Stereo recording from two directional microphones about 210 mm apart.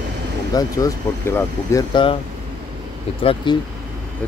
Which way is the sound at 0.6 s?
15° left (ahead or behind).